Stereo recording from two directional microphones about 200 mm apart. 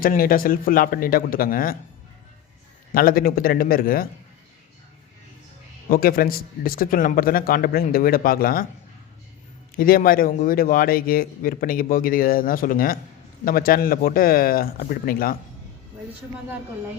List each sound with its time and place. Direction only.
0.0 s a man's voice: 45° left (ahead or behind)
2.9 s a man's voice: 45° left (ahead or behind)
5.9 s a man's voice: 45° left (ahead or behind)
9.7 s a man's voice: 45° left (ahead or behind)